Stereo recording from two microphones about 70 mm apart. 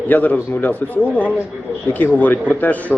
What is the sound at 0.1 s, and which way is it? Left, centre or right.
A man's voice, left.